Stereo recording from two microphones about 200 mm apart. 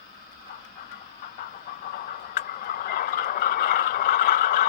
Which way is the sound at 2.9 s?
45° left (ahead or behind).